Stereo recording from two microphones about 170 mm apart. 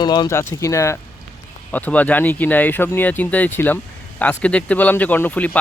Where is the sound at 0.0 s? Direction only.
25° left (ahead or behind).